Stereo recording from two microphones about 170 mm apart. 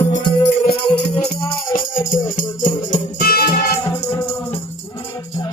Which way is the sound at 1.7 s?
50° left (ahead or behind).